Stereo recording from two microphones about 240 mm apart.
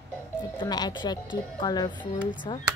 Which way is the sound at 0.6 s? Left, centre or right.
Centre.